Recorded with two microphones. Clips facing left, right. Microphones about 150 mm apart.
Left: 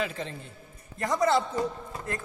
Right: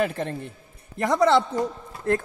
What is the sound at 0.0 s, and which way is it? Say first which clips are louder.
Speech: right 7 dB; 55° right (ahead or behind).